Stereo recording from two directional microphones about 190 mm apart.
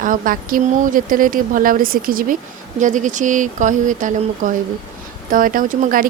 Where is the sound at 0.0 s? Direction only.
45° right (ahead or behind).